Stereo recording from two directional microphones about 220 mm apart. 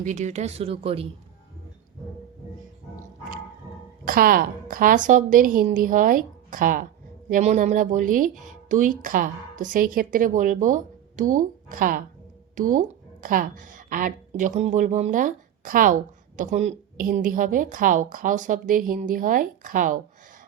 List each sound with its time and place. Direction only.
0.0 s speech: 35° right (ahead or behind)
2.9 s music: 40° right (ahead or behind)
4.0 s a woman's voice: 40° right (ahead or behind)